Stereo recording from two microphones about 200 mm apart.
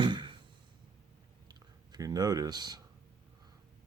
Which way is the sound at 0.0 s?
25° right (ahead or behind).